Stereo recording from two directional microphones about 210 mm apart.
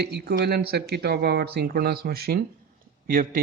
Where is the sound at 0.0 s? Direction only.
50° right (ahead or behind).